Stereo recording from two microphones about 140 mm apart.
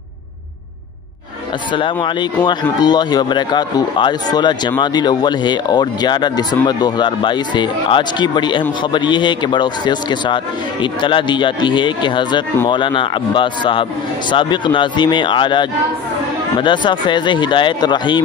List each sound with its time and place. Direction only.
1.7 s speech: 35° left (ahead or behind)